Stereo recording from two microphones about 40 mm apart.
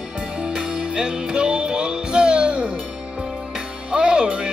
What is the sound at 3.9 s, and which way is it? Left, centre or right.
Music, right.